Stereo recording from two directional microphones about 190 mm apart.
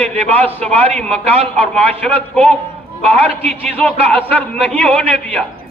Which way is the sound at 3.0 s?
35° right (ahead or behind).